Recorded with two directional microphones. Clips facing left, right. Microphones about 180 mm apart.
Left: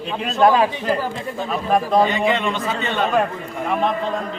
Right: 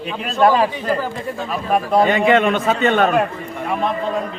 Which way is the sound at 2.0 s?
55° right (ahead or behind).